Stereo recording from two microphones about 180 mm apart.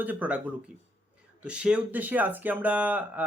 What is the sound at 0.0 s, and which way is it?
Speech, 10° right (ahead or behind).